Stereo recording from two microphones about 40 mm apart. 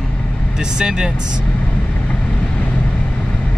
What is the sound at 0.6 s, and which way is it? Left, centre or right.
Speech, centre.